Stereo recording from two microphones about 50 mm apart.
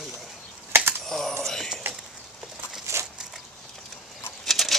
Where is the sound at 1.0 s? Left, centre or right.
Centre.